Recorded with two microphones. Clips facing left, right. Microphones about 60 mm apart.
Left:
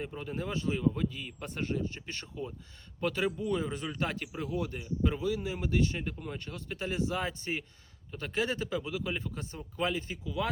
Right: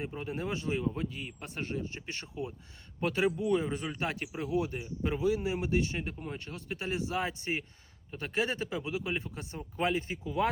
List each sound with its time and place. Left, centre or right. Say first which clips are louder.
0.2 s speech: even; right
1.4 s speech: left 3 dB; centre
1.8 s speech: left 2 dB; centre